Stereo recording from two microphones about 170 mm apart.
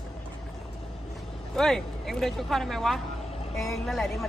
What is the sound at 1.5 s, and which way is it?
Speech, centre (ahead or behind).